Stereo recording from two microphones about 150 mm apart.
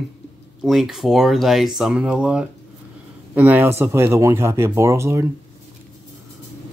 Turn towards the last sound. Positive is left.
turn(degrees=-20)  # may be behind; listen again after turning